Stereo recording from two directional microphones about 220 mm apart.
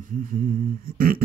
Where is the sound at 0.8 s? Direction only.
40° right (ahead or behind).